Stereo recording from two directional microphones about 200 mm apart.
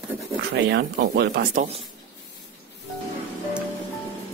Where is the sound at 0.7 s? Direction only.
55° right (ahead or behind).